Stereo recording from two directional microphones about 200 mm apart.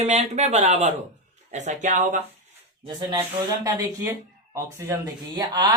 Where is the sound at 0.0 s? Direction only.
35° right (ahead or behind).